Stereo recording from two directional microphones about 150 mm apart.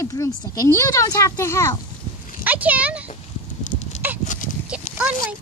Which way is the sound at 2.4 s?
10° right (ahead or behind).